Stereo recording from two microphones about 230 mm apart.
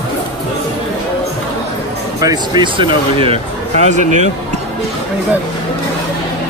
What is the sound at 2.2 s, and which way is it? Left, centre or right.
Speech, centre.